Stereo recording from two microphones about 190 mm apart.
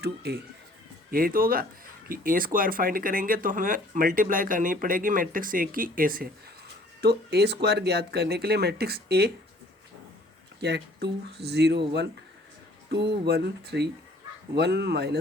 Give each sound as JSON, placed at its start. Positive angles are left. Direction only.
{"t": 0.0, "sound": "speech", "side_deg": -60}
{"t": 10.6, "sound": "speech", "side_deg": -60}